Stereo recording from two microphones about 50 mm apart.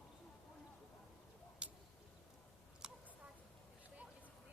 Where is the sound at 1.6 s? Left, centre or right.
Right.